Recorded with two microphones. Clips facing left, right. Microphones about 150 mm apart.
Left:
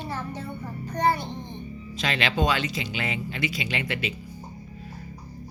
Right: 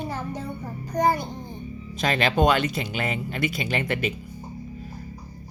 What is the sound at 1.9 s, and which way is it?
Speech, 45° right (ahead or behind).